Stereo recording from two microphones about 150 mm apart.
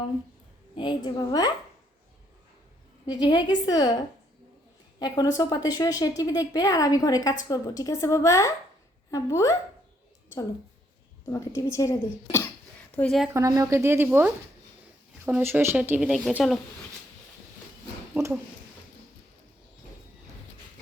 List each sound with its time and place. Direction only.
0.8 s speech: 30° left (ahead or behind)
3.1 s speech: 30° left (ahead or behind)
4.9 s speech: 25° left (ahead or behind)
11.3 s speech: 20° left (ahead or behind)
13.0 s speech: 5° left (ahead or behind)
13.3 s speech: 20° right (ahead or behind); by 16.3 s centre (ahead or behind)
18.1 s speech: 20° right (ahead or behind)